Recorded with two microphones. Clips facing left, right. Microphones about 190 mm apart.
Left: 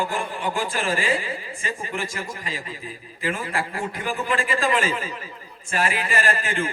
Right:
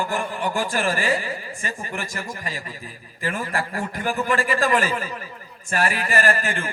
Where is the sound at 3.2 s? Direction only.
45° right (ahead or behind).